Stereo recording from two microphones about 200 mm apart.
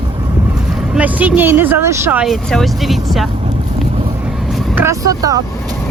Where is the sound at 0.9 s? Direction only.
5° right (ahead or behind).